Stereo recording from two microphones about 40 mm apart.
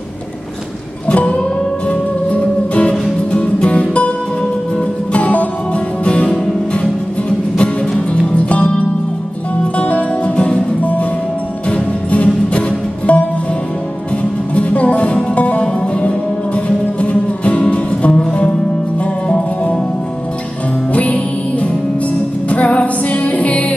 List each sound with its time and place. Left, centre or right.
1.0 s music: left
5.1 s music: left
7.5 s music: left
9.8 s music: left
14.5 s music: left
20.9 s music: left